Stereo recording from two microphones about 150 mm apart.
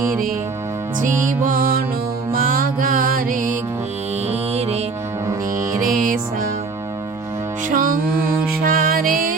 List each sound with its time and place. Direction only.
1.0 s music: 60° right (ahead or behind)
4.3 s music: 45° right (ahead or behind)
6.0 s music: 65° right (ahead or behind)
7.7 s music: 65° right (ahead or behind)